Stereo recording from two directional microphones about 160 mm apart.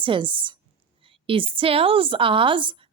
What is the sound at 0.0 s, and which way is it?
A woman's voice, 30° right (ahead or behind).